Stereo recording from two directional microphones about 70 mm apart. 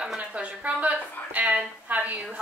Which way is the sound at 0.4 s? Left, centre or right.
Centre.